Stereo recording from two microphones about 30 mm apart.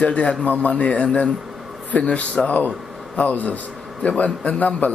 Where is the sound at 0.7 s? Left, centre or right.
Left.